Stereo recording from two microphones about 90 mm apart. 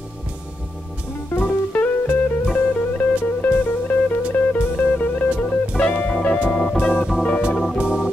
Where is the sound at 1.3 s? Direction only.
20° left (ahead or behind).